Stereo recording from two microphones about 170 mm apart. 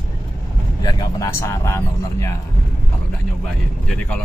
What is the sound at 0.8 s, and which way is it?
Speech, 20° left (ahead or behind).